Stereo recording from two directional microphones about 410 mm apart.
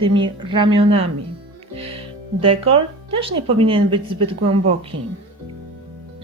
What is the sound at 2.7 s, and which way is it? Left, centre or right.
Speech, centre.